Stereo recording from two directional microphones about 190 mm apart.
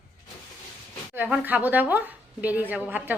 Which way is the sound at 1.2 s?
10° right (ahead or behind).